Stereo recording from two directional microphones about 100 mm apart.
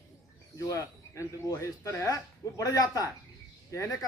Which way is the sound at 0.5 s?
30° left (ahead or behind).